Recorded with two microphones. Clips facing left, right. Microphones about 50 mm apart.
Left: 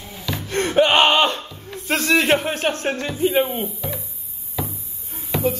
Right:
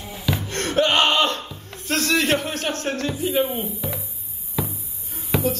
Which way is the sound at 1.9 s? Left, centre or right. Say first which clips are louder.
Left 3 dB; centre.